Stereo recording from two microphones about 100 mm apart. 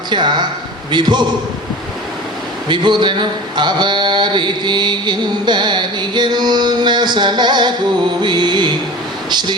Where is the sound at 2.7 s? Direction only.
50° right (ahead or behind).